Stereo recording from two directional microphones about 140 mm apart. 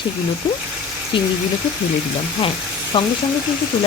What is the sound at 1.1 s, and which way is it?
Speech, 40° left (ahead or behind).